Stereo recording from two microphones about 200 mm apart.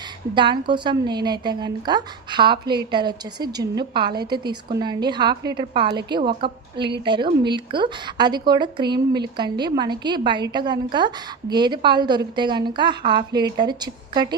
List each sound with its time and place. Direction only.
0.3 s a woman's voice: 25° right (ahead or behind)